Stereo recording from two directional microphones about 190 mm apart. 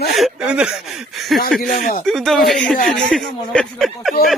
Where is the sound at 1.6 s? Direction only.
45° left (ahead or behind).